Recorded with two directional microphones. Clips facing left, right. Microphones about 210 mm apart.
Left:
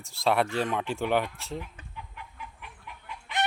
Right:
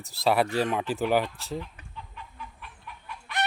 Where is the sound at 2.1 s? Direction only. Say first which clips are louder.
Right 1 dB; 15° left (ahead or behind).